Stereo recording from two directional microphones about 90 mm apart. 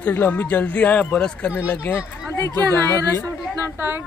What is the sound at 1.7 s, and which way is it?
Speech, 25° left (ahead or behind).